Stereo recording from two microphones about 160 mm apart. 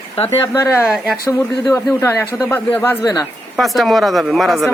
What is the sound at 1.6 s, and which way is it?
Speech, 15° left (ahead or behind).